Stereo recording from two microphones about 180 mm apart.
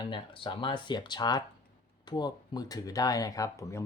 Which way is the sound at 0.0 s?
25° left (ahead or behind).